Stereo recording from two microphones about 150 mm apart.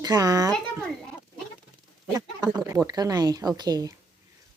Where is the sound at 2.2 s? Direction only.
25° right (ahead or behind).